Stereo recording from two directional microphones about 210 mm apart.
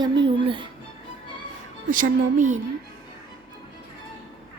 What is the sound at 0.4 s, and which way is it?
Speech, 25° right (ahead or behind).